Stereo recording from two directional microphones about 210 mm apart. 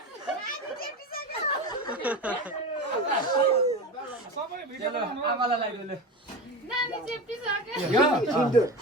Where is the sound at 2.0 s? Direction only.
5° right (ahead or behind).